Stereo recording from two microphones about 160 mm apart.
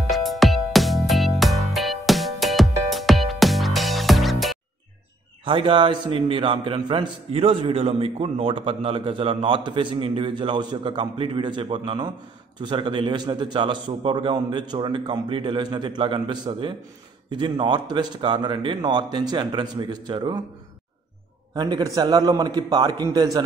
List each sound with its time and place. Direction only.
0.1 s music: centre (ahead or behind)
5.4 s a man's voice: 30° right (ahead or behind)
21.5 s a man's voice: 25° right (ahead or behind)